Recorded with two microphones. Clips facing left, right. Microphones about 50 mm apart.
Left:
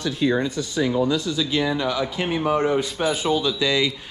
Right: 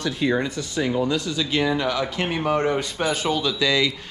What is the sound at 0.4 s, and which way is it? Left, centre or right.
Speech, right.